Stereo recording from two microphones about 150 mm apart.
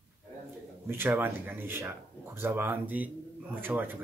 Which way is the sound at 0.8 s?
15° right (ahead or behind).